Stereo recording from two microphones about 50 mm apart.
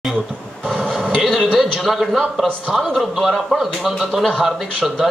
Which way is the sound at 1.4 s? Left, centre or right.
Centre.